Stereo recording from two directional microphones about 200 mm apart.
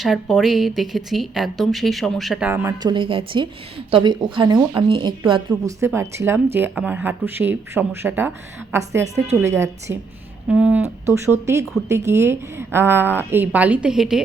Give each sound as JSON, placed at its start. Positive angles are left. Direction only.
{"t": 0.0, "sound": "speech", "side_deg": 0}
{"t": 2.5, "sound": "a woman's voice", "side_deg": -15}
{"t": 5.8, "sound": "speech", "side_deg": -15}